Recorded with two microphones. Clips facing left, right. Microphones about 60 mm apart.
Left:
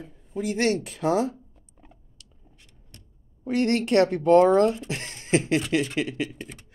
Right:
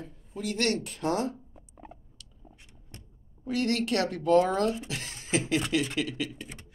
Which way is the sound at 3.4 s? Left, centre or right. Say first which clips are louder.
Left 5 dB; left.